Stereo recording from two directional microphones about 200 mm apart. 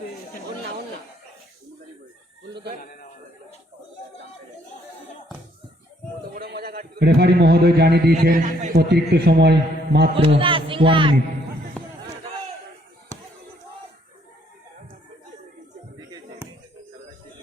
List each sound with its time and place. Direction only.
6.3 s a man's voice: 50° right (ahead or behind)
10.2 s speech: 25° right (ahead or behind)